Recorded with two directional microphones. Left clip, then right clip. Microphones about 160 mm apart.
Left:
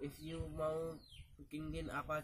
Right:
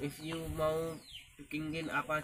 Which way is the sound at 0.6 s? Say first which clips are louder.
Right 6 dB; 5° left (ahead or behind).